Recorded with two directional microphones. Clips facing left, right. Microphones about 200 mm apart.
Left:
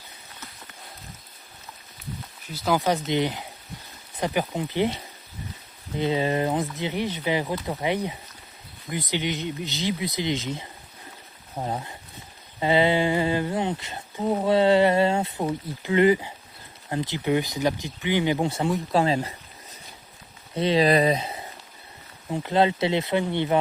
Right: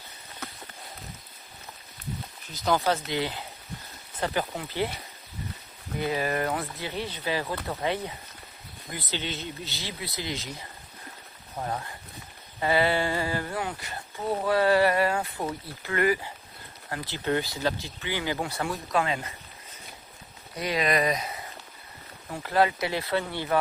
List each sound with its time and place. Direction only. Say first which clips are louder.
2.5 s speech: left 2 dB; 10° left (ahead or behind)
6.0 s speech: left 4 dB; 20° left (ahead or behind)
20.6 s speech: left 6 dB; 30° left (ahead or behind)